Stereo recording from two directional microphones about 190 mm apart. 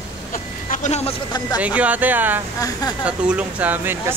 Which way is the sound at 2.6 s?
20° left (ahead or behind).